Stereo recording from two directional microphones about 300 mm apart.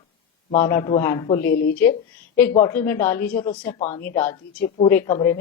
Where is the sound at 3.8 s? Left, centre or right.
Left.